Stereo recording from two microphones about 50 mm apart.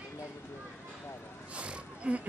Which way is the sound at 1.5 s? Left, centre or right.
Right.